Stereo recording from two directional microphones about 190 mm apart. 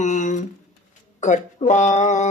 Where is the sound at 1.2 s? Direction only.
40° left (ahead or behind).